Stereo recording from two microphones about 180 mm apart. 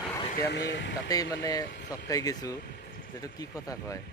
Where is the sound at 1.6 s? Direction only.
70° left (ahead or behind).